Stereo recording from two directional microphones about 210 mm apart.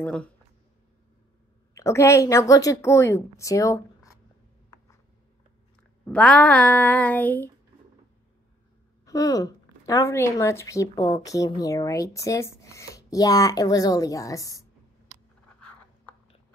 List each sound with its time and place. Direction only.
0.0 s speech: 5° left (ahead or behind)
1.8 s a woman's voice: 15° left (ahead or behind)
6.0 s a woman's voice: 5° left (ahead or behind)
9.0 s a woman's voice: 15° left (ahead or behind)